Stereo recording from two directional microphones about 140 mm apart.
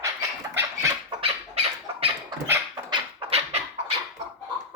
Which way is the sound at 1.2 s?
45° right (ahead or behind).